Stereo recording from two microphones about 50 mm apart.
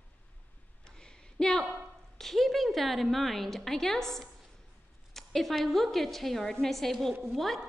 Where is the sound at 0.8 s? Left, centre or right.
Centre.